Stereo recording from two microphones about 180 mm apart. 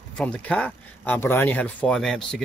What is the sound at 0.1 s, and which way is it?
Speech, 5° left (ahead or behind).